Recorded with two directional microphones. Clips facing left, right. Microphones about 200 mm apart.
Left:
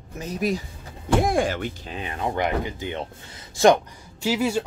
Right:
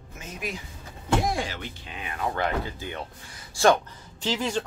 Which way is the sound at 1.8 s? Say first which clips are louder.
Right 1 dB; 30° left (ahead or behind).